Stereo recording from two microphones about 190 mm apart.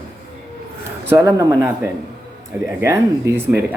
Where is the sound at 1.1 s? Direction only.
15° right (ahead or behind).